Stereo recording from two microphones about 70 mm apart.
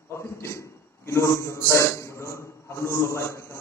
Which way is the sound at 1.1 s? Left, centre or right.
Left.